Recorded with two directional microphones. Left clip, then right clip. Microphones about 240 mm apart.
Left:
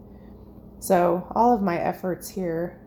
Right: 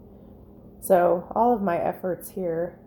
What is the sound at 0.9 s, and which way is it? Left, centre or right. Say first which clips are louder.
Speech: right 1 dB; centre.